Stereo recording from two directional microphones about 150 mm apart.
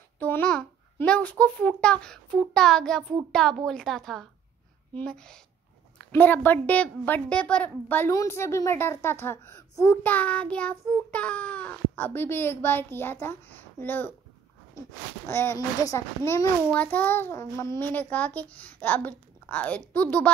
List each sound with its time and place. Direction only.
0.2 s babbling: 10° left (ahead or behind)
1.4 s a child's voice: 10° left (ahead or behind)
15.2 s a woman's voice: 15° left (ahead or behind)